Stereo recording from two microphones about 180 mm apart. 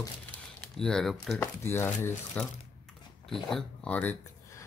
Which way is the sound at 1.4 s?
15° left (ahead or behind).